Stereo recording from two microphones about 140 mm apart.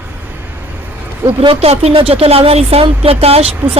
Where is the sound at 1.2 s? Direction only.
40° right (ahead or behind).